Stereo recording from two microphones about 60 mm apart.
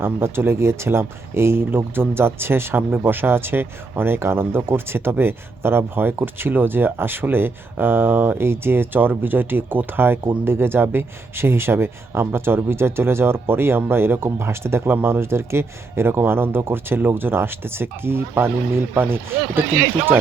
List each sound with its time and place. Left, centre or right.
0.0 s speech: right